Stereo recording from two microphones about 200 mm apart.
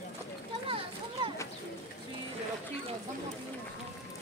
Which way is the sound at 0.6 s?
25° right (ahead or behind).